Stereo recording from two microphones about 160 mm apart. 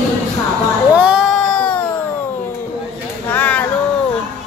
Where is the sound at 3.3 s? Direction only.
10° left (ahead or behind).